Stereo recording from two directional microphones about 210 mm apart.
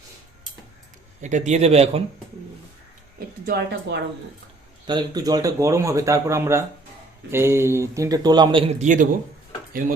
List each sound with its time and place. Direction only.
1.2 s speech: 35° right (ahead or behind)
3.2 s speech: 50° right (ahead or behind)
4.9 s speech: 20° right (ahead or behind); by 9.0 s 35° right (ahead or behind)